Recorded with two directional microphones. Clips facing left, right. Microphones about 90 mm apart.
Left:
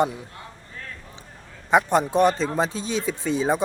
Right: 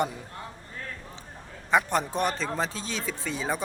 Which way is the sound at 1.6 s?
15° left (ahead or behind).